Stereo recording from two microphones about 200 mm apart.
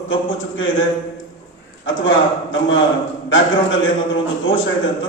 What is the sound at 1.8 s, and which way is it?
A man's voice, 70° left (ahead or behind).